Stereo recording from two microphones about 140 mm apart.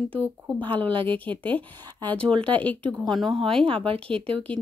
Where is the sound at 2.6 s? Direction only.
10° left (ahead or behind).